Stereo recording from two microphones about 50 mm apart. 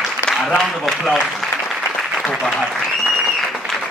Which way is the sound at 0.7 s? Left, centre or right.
Centre.